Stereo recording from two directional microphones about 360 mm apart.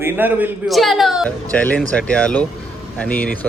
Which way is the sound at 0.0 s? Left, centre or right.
Centre.